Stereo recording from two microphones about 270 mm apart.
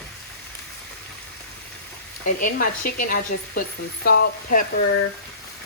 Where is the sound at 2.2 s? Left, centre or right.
Left.